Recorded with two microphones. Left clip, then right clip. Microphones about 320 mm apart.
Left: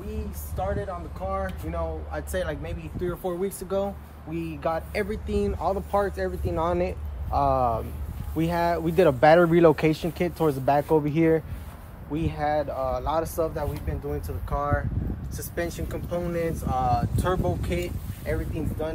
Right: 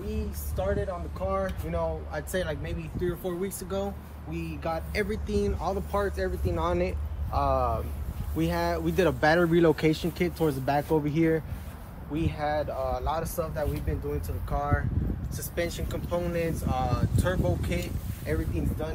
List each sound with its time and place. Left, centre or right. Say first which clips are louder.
0.1 s speech: right 1 dB; centre; by 13.7 s left
15.3 s speech: left 1 dB; centre